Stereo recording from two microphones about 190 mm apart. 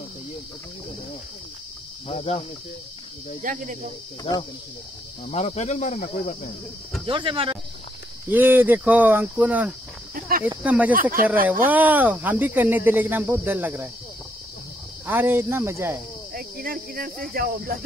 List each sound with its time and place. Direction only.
2.0 s speech: 30° left (ahead or behind)
3.4 s cricket: 45° right (ahead or behind)
4.2 s speech: 20° left (ahead or behind)
5.3 s speech: 35° left (ahead or behind)
7.1 s speech: 30° right (ahead or behind)
8.3 s speech: 10° right (ahead or behind)
11.0 s cricket: 50° right (ahead or behind)
11.4 s speech: 10° right (ahead or behind)
15.0 s speech: 10° right (ahead or behind)
16.3 s speech: 50° right (ahead or behind)
17.3 s cricket: 50° right (ahead or behind)